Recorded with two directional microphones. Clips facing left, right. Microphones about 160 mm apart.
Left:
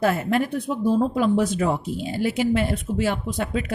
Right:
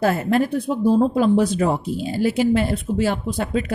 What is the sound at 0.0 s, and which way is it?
Speech, 40° right (ahead or behind).